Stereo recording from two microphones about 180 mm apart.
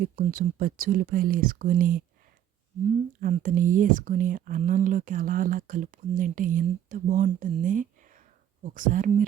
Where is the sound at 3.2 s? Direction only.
50° right (ahead or behind).